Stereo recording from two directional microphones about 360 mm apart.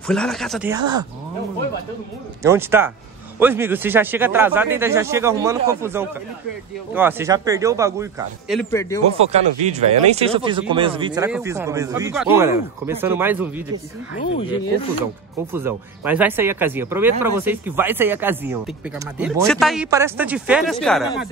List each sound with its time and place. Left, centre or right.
0.0 s speech: centre
2.4 s a man's voice: centre
9.1 s a man's voice: centre
15.5 s speech: centre